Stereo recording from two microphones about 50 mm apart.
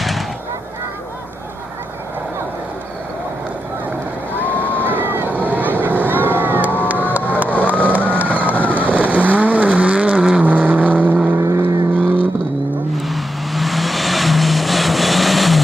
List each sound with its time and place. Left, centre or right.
4.4 s boat: left
4.8 s boat: right
5.5 s vehicle: right
7.2 s a sound: right
7.6 s vehicle: right
12.9 s vehicle: centre